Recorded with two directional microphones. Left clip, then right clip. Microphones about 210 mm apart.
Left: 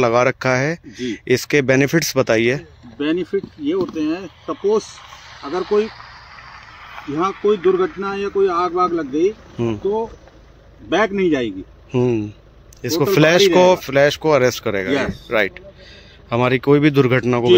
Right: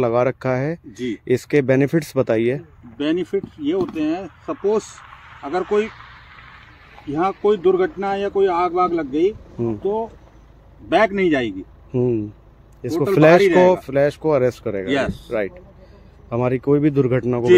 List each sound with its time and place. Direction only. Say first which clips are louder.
0.0 s speech: left 3 dB; 5° right (ahead or behind)
3.9 s speech: even; 15° right (ahead or behind)
4.8 s a sound: left 3 dB; 45° left (ahead or behind)
5.4 s speech: left 1 dB; 15° right (ahead or behind)
5.9 s vehicle: left 2 dB; 40° left (ahead or behind)
7.4 s speech: left 1 dB; 10° right (ahead or behind)
9.1 s speech: left 1 dB; centre (ahead or behind)